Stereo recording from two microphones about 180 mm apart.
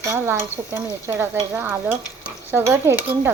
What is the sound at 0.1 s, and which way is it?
Stir, 10° right (ahead or behind).